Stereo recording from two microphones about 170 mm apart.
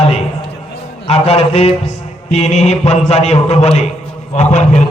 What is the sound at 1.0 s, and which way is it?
A man's voice, 35° left (ahead or behind).